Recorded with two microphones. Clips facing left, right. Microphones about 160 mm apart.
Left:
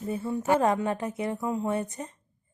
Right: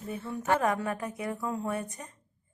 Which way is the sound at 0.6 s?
25° left (ahead or behind).